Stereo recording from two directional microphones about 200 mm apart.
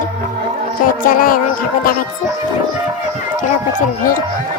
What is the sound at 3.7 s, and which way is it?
Speech, 45° left (ahead or behind).